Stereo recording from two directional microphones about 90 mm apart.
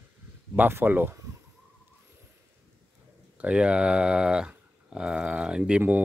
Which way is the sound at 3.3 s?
15° right (ahead or behind).